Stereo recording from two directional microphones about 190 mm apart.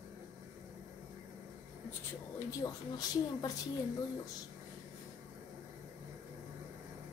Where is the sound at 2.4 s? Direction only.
20° left (ahead or behind).